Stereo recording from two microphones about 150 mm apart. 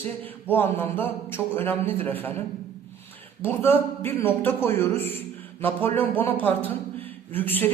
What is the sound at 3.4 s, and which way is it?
A man's voice, 15° left (ahead or behind).